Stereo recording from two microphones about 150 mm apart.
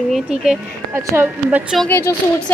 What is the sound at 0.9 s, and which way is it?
Speech, 15° right (ahead or behind).